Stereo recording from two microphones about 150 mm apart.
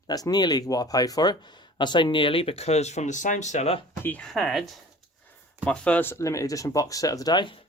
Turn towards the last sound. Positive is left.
turn(degrees=30)  # may be behind; listen again after turning